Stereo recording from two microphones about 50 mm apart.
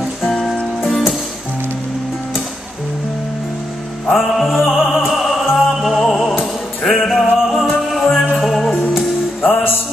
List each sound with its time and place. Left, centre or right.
4.1 s music: centre
9.4 s music: left